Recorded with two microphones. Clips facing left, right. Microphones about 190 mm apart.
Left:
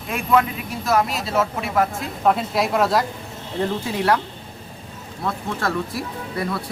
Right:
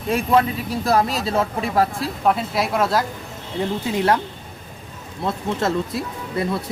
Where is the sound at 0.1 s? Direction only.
35° right (ahead or behind).